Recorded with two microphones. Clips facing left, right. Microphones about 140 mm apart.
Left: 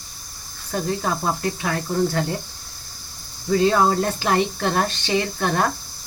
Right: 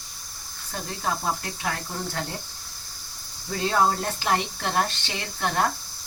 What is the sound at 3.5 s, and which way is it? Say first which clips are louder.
Speech: left 6 dB; 90° left.